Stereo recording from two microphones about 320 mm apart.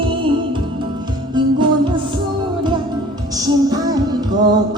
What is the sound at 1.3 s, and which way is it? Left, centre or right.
Music, centre.